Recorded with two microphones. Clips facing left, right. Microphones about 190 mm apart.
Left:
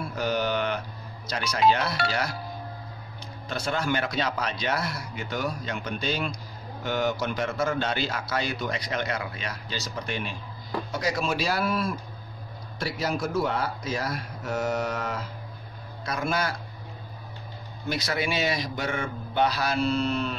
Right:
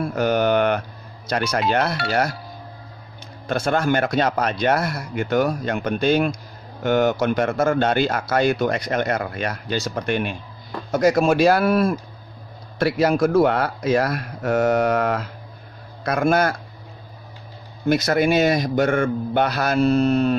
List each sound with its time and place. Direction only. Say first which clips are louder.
0.0 s a sound: right 8 dB; 55° right (ahead or behind)
1.3 s speech: right 3 dB; 55° right (ahead or behind)
3.4 s speech: right 8 dB; 50° right (ahead or behind)
17.8 s speech: right 11 dB; 50° right (ahead or behind)